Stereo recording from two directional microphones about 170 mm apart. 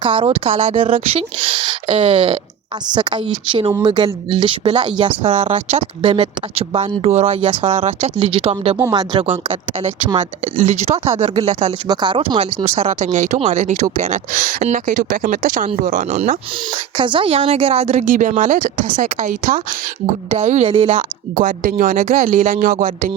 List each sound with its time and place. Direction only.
0.0 s speech: 30° right (ahead or behind)
9.2 s speech: 45° right (ahead or behind)
11.9 s speech: 25° right (ahead or behind); by 16.4 s 45° right (ahead or behind)
17.0 s speech: 30° right (ahead or behind)
18.1 s speech: 50° right (ahead or behind)
20.3 s speech: 40° right (ahead or behind)
20.7 s speech: 30° right (ahead or behind)
20.9 s speech: 50° right (ahead or behind)